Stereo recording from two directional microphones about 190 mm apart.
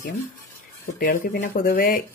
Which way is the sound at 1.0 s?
50° left (ahead or behind).